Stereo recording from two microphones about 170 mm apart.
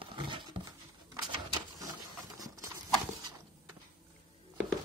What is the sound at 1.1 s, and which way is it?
Printer, 20° right (ahead or behind).